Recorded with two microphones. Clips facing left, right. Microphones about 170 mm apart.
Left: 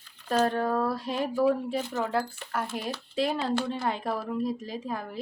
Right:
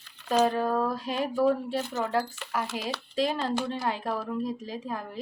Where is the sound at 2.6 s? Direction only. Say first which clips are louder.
Even; 85° right.